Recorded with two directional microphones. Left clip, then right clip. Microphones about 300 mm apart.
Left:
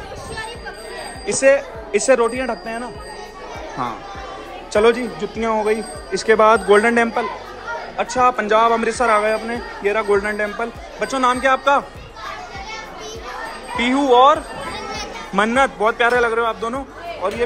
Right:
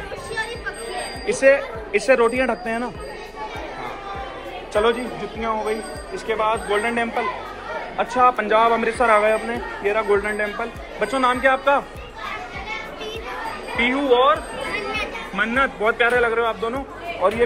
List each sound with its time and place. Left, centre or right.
1.2 s a woman's voice: centre
4.7 s speech: left
13.7 s a man's voice: centre